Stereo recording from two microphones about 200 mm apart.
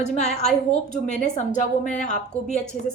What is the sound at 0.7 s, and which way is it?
A woman's voice, 35° left (ahead or behind).